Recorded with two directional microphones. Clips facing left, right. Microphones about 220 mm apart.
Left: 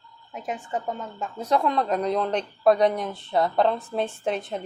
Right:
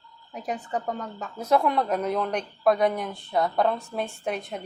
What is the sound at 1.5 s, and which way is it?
Speech, 10° right (ahead or behind).